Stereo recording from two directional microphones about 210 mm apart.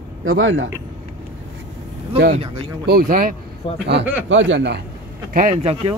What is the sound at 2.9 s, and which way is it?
Speech, 45° right (ahead or behind).